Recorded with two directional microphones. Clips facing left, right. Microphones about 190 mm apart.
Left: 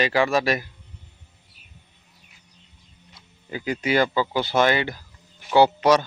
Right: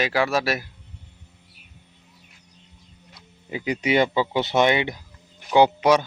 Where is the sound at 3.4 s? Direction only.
20° right (ahead or behind).